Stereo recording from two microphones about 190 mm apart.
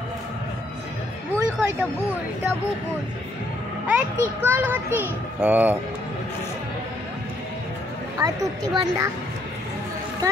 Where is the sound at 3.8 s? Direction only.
10° right (ahead or behind).